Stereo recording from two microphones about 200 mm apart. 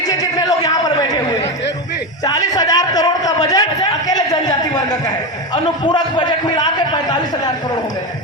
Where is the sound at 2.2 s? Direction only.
20° left (ahead or behind).